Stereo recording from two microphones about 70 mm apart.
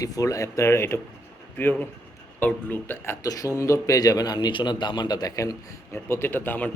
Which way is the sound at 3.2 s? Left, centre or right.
Left.